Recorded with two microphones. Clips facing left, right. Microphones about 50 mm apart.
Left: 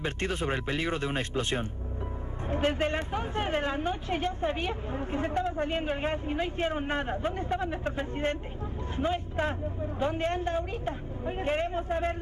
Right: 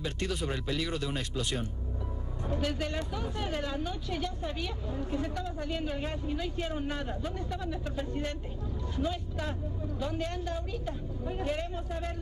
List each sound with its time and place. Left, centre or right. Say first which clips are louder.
0.0 s a woman's voice: left 3 dB; left